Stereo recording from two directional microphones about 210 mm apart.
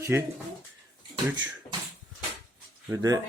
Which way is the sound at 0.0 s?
10° right (ahead or behind).